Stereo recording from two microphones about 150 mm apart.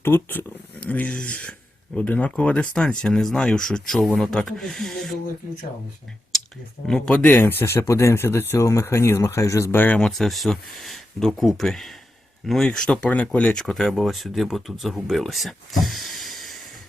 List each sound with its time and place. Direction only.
0.0 s speech: 15° left (ahead or behind)
6.8 s speech: 5° left (ahead or behind)